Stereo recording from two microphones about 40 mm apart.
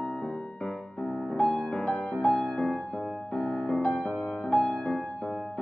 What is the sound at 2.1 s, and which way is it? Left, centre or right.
Music, centre.